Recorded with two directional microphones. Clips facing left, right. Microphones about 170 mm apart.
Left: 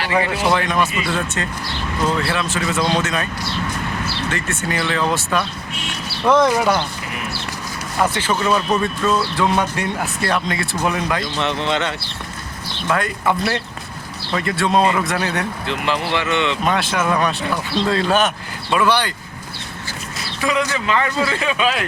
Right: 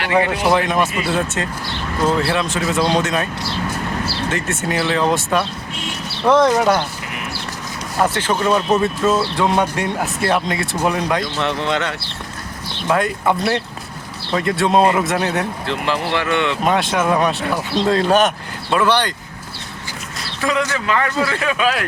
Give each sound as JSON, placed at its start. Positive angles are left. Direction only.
{"t": 0.4, "sound": "speech", "side_deg": -5}
{"t": 4.3, "sound": "speech", "side_deg": 0}
{"t": 6.4, "sound": "a man's voice", "side_deg": 10}
{"t": 8.1, "sound": "speech", "side_deg": 5}
{"t": 11.6, "sound": "speech", "side_deg": 25}
{"t": 12.9, "sound": "speech", "side_deg": 0}
{"t": 15.6, "sound": "a man's voice", "side_deg": 15}
{"t": 16.6, "sound": "a man's voice", "side_deg": 0}
{"t": 20.4, "sound": "a man's voice", "side_deg": 15}